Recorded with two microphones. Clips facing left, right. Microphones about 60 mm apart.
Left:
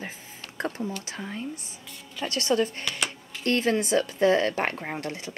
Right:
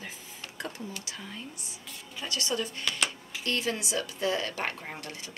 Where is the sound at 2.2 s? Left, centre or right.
Left.